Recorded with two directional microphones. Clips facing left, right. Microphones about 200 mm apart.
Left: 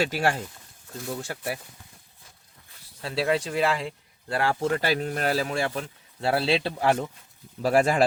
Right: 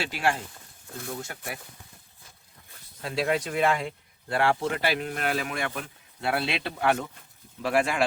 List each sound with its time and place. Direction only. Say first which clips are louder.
0.0 s speech: left 3 dB; 40° left (ahead or behind)
3.0 s speech: left 1 dB; 30° left (ahead or behind)